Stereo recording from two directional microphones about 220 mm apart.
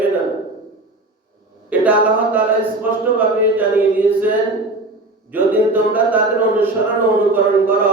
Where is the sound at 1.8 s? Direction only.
5° right (ahead or behind).